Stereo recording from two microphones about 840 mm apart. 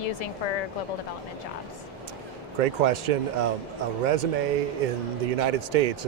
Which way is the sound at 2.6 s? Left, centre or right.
Right.